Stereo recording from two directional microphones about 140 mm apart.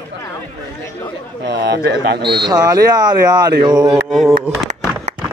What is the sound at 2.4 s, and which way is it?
Speech, 25° right (ahead or behind).